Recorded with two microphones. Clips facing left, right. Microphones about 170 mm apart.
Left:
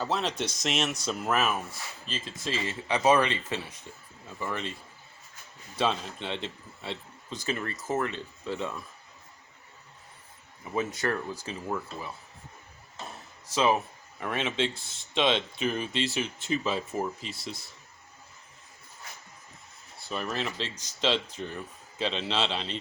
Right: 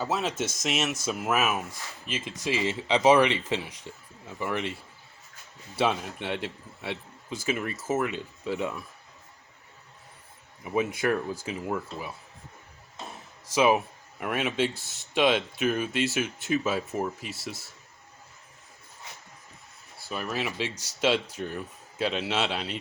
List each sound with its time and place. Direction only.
0.0 s a man's voice: 5° right (ahead or behind)
5.7 s a man's voice: 10° right (ahead or behind)
10.6 s a man's voice: 10° right (ahead or behind)
13.5 s speech: 10° right (ahead or behind)
20.1 s a man's voice: 5° right (ahead or behind)